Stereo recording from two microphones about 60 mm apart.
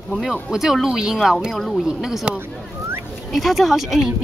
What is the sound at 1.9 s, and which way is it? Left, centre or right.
Speech, centre.